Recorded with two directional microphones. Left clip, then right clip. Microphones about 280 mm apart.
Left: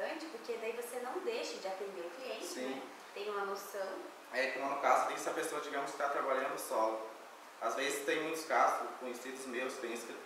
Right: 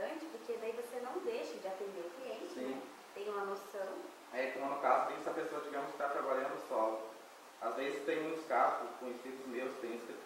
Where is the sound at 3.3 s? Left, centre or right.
Centre.